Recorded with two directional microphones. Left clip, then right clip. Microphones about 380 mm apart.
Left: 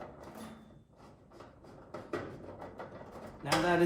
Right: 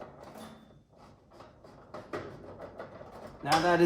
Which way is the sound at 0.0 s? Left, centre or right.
Centre.